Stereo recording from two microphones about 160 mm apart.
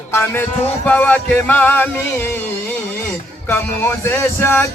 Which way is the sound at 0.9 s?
10° left (ahead or behind).